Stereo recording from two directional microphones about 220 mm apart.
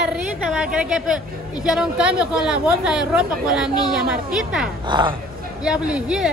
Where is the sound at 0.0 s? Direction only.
5° right (ahead or behind).